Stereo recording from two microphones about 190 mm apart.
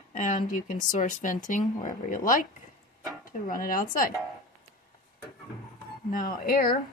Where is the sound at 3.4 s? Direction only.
45° left (ahead or behind).